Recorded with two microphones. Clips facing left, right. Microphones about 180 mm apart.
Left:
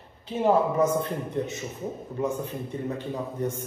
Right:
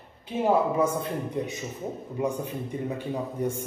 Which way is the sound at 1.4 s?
10° right (ahead or behind).